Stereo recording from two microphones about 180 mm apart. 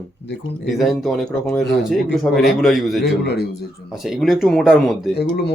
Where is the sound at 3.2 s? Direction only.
65° left (ahead or behind).